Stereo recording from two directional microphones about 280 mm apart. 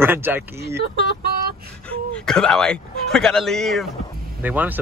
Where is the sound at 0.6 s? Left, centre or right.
Right.